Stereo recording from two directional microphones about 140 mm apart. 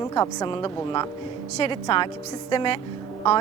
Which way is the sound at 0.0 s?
25° left (ahead or behind).